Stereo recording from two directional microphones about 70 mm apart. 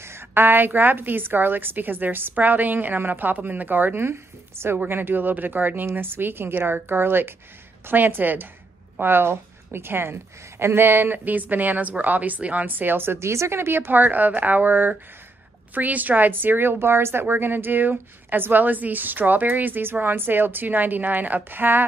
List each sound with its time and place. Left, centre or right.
0.0 s a woman's voice: right